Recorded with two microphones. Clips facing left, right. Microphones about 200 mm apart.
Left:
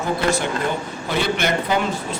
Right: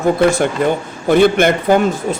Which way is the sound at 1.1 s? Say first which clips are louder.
Right 10 dB; 50° right (ahead or behind).